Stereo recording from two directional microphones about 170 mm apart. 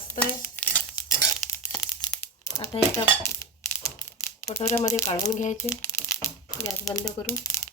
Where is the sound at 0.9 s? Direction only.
20° left (ahead or behind).